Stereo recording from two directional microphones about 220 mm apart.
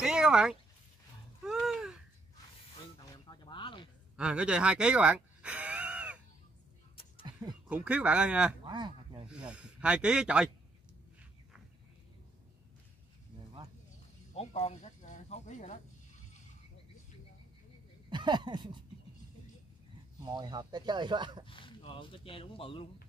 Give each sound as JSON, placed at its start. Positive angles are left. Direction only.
{"t": 0.0, "sound": "a sound", "side_deg": -5}
{"t": 3.3, "sound": "a sound", "side_deg": 20}
{"t": 4.2, "sound": "speech", "side_deg": -5}
{"t": 7.6, "sound": "speech", "side_deg": -5}
{"t": 8.6, "sound": "speech", "side_deg": -20}
{"t": 9.3, "sound": "speech", "side_deg": -5}
{"t": 14.3, "sound": "a sound", "side_deg": 30}
{"t": 18.1, "sound": "speech", "side_deg": -20}
{"t": 20.2, "sound": "speech", "side_deg": -20}
{"t": 21.5, "sound": "speech", "side_deg": 25}